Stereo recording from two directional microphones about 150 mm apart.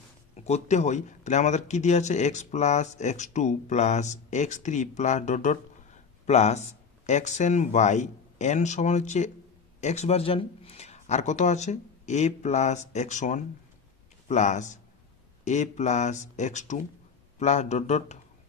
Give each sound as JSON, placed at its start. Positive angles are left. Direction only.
{"t": 0.4, "sound": "speech", "side_deg": 50}